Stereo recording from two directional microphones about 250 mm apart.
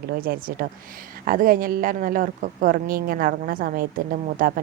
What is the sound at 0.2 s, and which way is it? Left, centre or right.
Speech, right.